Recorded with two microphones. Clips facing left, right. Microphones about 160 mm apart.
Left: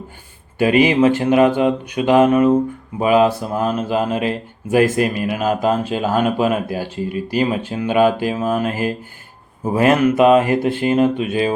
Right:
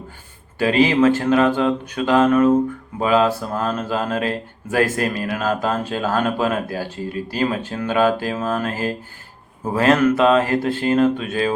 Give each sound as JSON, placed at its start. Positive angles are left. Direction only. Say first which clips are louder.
{"t": 0.6, "sound": "speech", "louder": "left 2 dB", "side_deg": 15}